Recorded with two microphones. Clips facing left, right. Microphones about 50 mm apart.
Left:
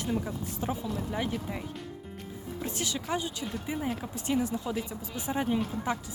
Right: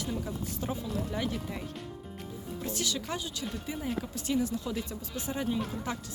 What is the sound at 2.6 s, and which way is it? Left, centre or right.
Speech, left.